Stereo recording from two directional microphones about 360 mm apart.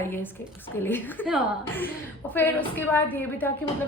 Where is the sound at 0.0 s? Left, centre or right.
Centre.